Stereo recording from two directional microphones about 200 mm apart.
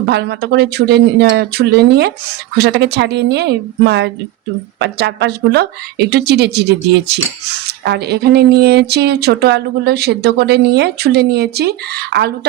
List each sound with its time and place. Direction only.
0.0 s speech: 55° right (ahead or behind)